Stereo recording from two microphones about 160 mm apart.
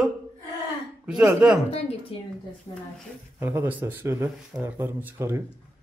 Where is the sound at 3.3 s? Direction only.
10° right (ahead or behind).